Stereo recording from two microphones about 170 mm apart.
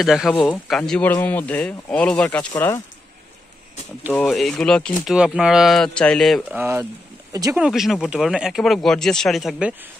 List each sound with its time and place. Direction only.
0.0 s speech: centre (ahead or behind)
2.5 s speech: 20° left (ahead or behind)
4.1 s speech: 5° left (ahead or behind)
6.5 s speech: 15° right (ahead or behind)
7.5 s speech: 5° right (ahead or behind)